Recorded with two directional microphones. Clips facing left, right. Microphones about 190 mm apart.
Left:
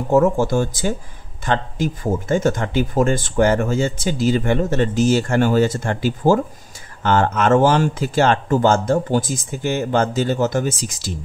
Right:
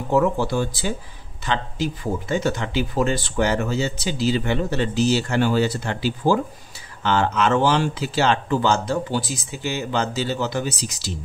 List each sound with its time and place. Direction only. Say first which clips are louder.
0.1 s speech: left 4 dB; 45° left (ahead or behind)